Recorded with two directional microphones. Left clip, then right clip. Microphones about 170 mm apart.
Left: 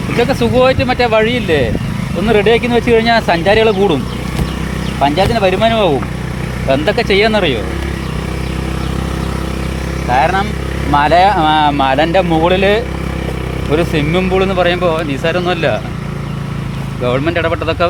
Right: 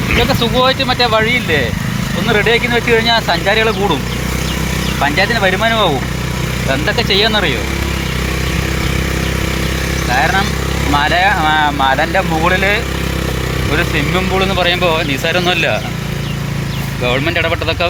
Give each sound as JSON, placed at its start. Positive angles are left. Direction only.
{"t": 0.2, "sound": "speech", "side_deg": 75}
{"t": 5.4, "sound": "speech", "side_deg": 60}
{"t": 6.7, "sound": "speech", "side_deg": 80}
{"t": 10.9, "sound": "speech", "side_deg": 90}
{"t": 14.4, "sound": "speech", "side_deg": 45}
{"t": 17.0, "sound": "speech", "side_deg": 35}